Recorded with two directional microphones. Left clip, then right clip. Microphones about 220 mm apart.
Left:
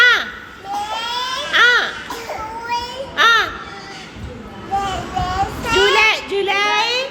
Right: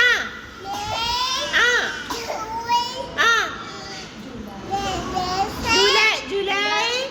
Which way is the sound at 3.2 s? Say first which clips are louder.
Left 5 dB; 15° left (ahead or behind).